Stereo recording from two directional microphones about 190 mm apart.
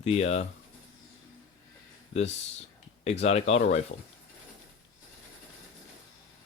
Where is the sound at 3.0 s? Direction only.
35° left (ahead or behind).